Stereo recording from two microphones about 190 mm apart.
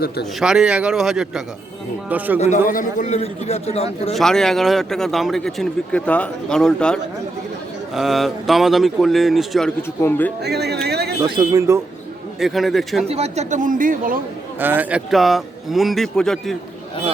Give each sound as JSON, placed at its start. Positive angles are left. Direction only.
{"t": 0.3, "sound": "speech", "side_deg": -5}
{"t": 2.6, "sound": "a man's voice", "side_deg": 45}
{"t": 4.1, "sound": "speech", "side_deg": 0}
{"t": 10.4, "sound": "speech", "side_deg": -60}
{"t": 10.8, "sound": "a sound", "side_deg": -60}
{"t": 11.2, "sound": "speech", "side_deg": -20}
{"t": 12.4, "sound": "speech", "side_deg": 0}
{"t": 13.1, "sound": "a man's voice", "side_deg": -35}
{"t": 14.6, "sound": "speech", "side_deg": -10}